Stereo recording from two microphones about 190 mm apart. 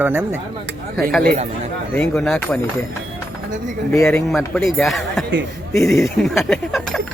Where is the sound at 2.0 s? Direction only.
5° left (ahead or behind).